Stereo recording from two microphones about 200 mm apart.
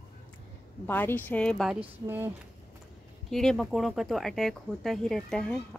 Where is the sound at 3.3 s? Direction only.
Centre (ahead or behind).